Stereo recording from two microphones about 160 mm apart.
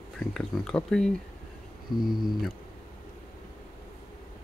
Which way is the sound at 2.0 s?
Centre (ahead or behind).